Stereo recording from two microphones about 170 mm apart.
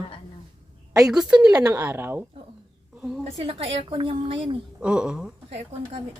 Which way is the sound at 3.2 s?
35° right (ahead or behind).